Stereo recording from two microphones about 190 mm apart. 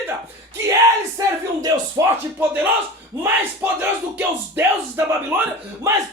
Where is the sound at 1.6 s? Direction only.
15° right (ahead or behind).